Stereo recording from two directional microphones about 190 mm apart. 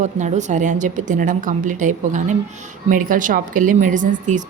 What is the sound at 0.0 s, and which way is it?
A woman's voice, 40° right (ahead or behind).